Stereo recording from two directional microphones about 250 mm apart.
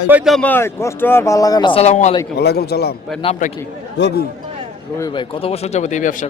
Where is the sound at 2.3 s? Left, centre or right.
Left.